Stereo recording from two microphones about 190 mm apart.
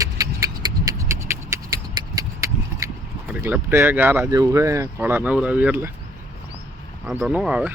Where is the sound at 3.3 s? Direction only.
10° right (ahead or behind).